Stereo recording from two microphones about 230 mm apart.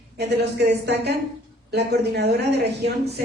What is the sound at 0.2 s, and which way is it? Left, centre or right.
A woman's voice, right.